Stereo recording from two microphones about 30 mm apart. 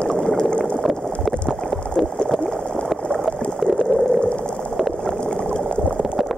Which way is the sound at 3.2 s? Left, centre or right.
Centre.